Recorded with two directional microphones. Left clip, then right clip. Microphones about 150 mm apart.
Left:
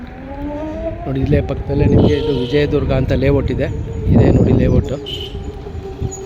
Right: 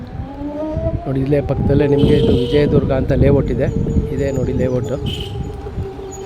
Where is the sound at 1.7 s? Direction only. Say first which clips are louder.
Right 3 dB; 25° right (ahead or behind).